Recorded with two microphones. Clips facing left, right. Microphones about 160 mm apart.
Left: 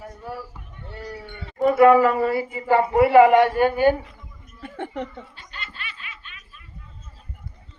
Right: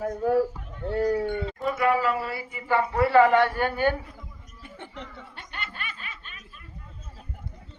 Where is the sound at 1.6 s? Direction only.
50° left (ahead or behind).